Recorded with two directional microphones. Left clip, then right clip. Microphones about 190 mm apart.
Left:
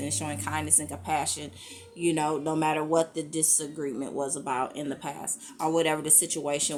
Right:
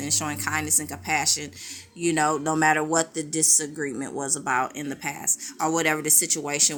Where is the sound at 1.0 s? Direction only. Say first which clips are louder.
Right 5 dB; 75° right (ahead or behind).